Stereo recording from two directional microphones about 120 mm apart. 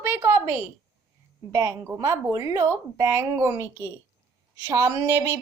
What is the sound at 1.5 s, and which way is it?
A woman's voice, 25° right (ahead or behind).